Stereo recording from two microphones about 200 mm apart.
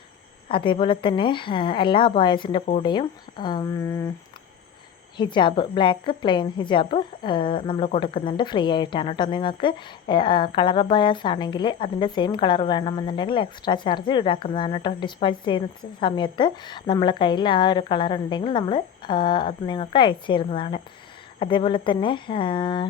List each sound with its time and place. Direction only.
0.4 s a woman's voice: 25° left (ahead or behind)
5.1 s a woman's voice: 25° left (ahead or behind)